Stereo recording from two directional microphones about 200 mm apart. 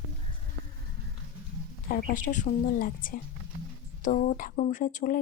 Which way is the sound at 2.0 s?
40° left (ahead or behind).